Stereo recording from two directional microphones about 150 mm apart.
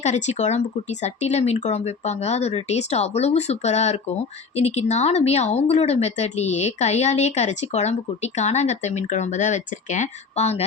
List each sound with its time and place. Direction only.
0.0 s speech: 50° left (ahead or behind)